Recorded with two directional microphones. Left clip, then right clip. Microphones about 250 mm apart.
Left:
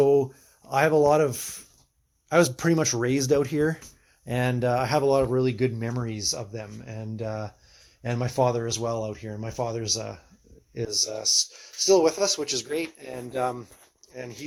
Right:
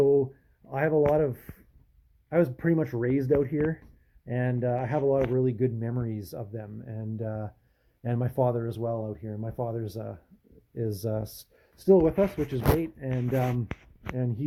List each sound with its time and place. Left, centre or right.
0.0 s a sound: centre
0.7 s speech: centre
10.9 s speech: centre
11.9 s speech: left